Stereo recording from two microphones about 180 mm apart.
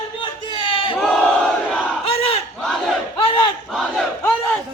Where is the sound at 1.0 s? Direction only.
5° left (ahead or behind).